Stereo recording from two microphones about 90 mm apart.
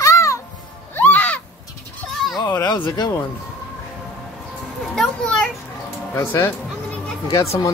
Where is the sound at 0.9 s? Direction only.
20° left (ahead or behind).